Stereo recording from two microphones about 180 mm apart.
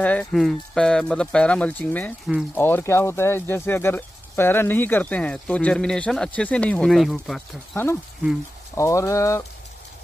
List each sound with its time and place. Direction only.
0.0 s speech: 10° left (ahead or behind)
7.7 s speech: 10° left (ahead or behind)